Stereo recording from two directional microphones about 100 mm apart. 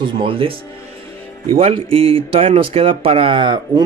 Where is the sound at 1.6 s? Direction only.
70° right (ahead or behind); by 3.8 s 50° right (ahead or behind).